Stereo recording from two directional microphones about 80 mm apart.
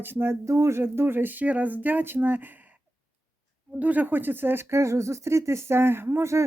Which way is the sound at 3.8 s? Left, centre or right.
Right.